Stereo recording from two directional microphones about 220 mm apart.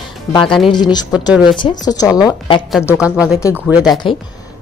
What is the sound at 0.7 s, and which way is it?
A woman's voice, 20° left (ahead or behind).